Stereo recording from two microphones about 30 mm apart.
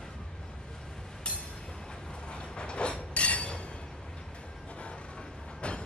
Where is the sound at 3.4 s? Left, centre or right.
Left.